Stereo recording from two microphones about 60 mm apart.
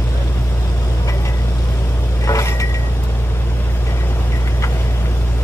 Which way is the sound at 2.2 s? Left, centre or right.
Left.